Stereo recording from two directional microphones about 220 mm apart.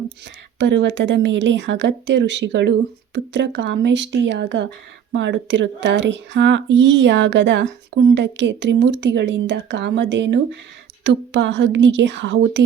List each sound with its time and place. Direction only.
0.6 s speech: 55° right (ahead or behind)